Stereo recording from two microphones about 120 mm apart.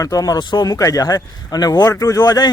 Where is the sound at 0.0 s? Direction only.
30° left (ahead or behind).